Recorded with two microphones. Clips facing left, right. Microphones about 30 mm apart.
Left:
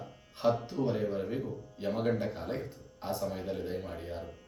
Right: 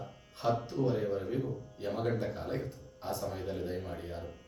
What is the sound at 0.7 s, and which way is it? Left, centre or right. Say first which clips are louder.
Speech: even; centre.